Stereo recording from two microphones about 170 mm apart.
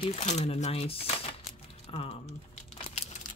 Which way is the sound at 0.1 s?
40° left (ahead or behind).